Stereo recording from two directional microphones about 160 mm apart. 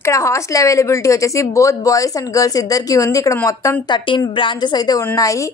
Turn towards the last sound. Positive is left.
turn(degrees=20)  # may be behind; listen again after turning